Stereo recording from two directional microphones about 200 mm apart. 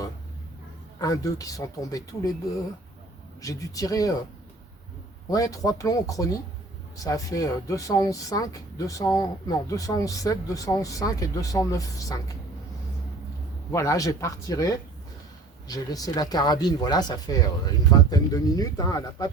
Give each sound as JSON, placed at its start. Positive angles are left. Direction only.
{"t": 0.9, "sound": "speech", "side_deg": 15}
{"t": 3.4, "sound": "speech", "side_deg": 15}
{"t": 5.3, "sound": "speech", "side_deg": 15}
{"t": 13.7, "sound": "speech", "side_deg": 15}